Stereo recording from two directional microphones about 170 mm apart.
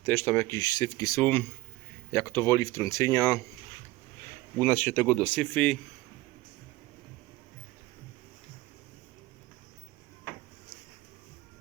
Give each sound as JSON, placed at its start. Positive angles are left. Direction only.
{"t": 0.0, "sound": "speech", "side_deg": 10}
{"t": 4.5, "sound": "speech", "side_deg": 10}